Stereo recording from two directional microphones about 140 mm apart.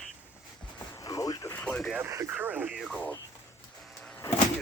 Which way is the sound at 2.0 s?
20° right (ahead or behind).